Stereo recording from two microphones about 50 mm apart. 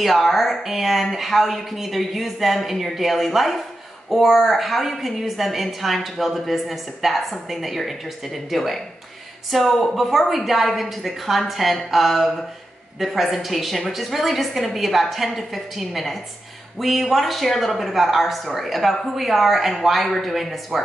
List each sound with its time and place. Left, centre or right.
0.0 s a woman's voice: centre